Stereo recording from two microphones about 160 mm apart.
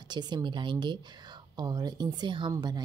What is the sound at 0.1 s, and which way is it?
A woman's voice, 25° right (ahead or behind).